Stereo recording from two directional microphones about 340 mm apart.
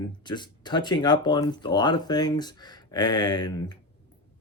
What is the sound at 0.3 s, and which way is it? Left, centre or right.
Speech, centre.